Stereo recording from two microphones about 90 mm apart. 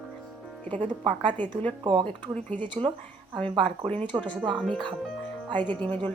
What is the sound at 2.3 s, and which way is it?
Speech, 15° left (ahead or behind).